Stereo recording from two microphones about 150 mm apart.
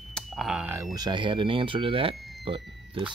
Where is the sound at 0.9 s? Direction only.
30° right (ahead or behind).